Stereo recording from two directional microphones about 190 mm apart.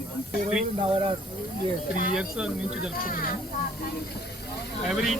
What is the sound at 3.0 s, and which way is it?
Speech, 50° left (ahead or behind).